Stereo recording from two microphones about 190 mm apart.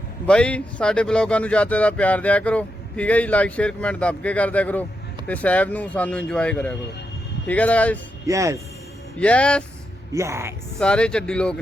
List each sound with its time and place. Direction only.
0.3 s speech: 5° left (ahead or behind)
8.3 s speech: 15° right (ahead or behind)
9.1 s speech: 5° left (ahead or behind)
10.1 s speech: 15° right (ahead or behind)
10.8 s speech: 5° left (ahead or behind)